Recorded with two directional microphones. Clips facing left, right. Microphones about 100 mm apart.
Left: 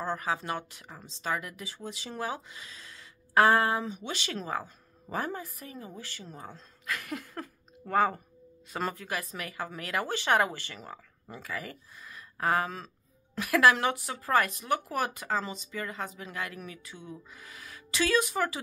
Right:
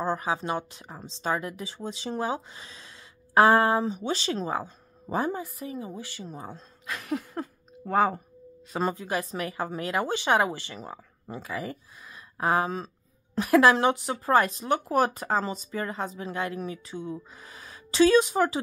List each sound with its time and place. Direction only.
0.0 s a woman's voice: 20° right (ahead or behind)